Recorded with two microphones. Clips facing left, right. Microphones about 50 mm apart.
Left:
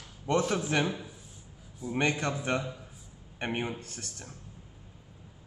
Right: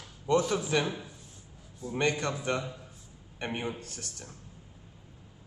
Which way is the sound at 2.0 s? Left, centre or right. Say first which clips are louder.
Even; left.